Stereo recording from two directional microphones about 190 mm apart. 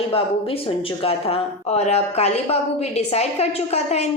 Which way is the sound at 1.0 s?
30° left (ahead or behind).